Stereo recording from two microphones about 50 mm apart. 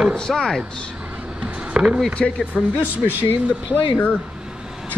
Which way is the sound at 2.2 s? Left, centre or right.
Centre.